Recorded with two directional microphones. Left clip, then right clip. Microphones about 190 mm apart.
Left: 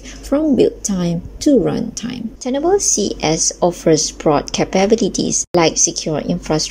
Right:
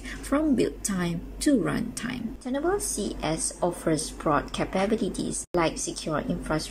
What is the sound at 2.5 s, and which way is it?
A woman's voice, 25° left (ahead or behind).